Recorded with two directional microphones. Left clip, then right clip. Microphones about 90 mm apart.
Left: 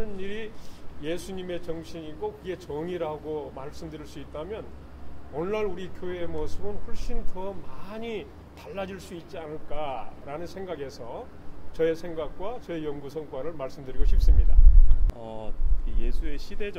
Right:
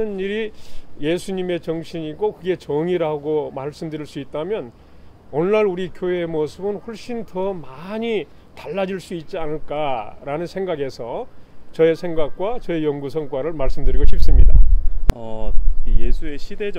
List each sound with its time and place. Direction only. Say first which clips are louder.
0.0 s speech: right 12 dB; 40° right (ahead or behind)
15.1 s speech: right 7 dB; 25° right (ahead or behind)